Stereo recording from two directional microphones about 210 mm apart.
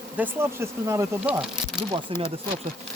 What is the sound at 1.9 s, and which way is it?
Speech, 25° right (ahead or behind).